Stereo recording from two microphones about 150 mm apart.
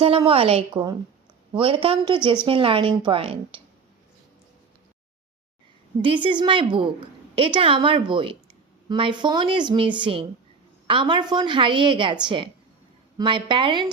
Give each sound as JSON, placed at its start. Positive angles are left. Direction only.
{"t": 0.3, "sound": "a woman's voice", "side_deg": -40}
{"t": 6.0, "sound": "a woman's voice", "side_deg": -35}